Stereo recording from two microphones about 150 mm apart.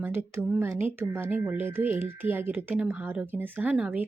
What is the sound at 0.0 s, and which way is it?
A woman's voice, 15° right (ahead or behind).